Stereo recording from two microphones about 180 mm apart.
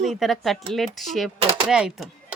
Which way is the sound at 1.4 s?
30° right (ahead or behind).